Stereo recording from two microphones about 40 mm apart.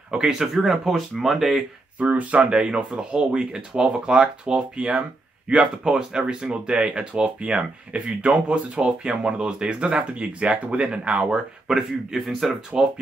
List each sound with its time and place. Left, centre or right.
0.1 s speech: centre
2.0 s speech: right
2.5 s speech: right
11.6 s speech: centre